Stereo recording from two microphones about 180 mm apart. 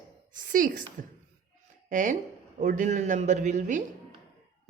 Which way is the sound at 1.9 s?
45° right (ahead or behind).